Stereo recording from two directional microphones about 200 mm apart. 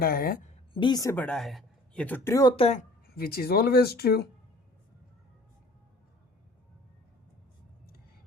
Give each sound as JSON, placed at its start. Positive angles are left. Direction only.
{"t": 0.0, "sound": "speech", "side_deg": 45}
{"t": 0.7, "sound": "a woman's voice", "side_deg": 25}
{"t": 3.2, "sound": "speech", "side_deg": 50}